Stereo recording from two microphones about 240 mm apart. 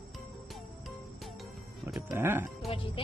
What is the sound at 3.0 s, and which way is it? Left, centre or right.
Music, left.